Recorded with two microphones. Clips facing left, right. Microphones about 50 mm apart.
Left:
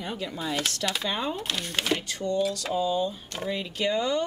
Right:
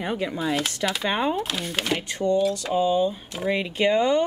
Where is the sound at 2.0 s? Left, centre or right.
Centre.